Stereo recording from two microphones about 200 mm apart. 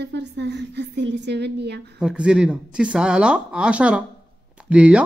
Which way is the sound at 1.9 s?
5° right (ahead or behind).